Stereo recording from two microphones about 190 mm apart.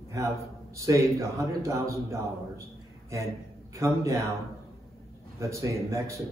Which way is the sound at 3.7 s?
15° right (ahead or behind).